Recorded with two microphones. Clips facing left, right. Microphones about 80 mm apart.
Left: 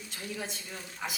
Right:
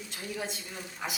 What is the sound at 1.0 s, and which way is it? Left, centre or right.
Speech, centre.